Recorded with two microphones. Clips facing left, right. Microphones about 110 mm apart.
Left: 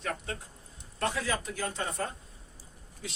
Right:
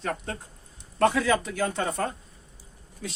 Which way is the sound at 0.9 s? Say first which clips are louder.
Right 9 dB; 70° right (ahead or behind).